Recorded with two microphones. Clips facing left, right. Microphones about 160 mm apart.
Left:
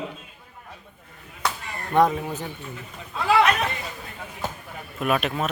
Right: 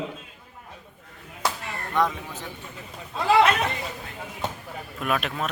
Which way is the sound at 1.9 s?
50° left (ahead or behind).